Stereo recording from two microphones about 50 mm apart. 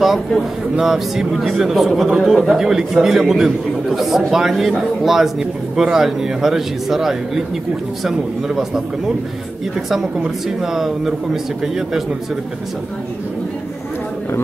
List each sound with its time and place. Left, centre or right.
0.7 s speech: centre